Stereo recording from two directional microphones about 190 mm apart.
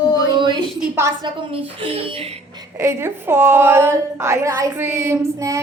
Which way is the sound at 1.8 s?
30° right (ahead or behind).